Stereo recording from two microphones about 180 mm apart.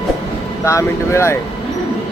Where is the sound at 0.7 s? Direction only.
15° left (ahead or behind).